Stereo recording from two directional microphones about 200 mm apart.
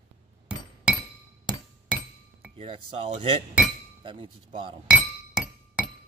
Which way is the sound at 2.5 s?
30° right (ahead or behind).